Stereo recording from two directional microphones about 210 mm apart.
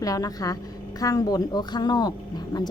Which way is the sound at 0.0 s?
15° left (ahead or behind).